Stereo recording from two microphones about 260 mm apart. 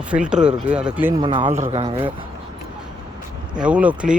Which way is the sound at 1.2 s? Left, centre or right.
Centre.